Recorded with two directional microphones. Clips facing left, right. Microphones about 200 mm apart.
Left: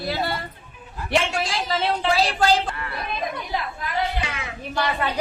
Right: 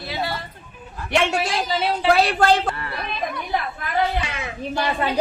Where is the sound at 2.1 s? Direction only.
55° right (ahead or behind).